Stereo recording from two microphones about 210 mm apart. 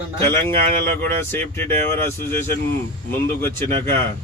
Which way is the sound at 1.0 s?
10° left (ahead or behind).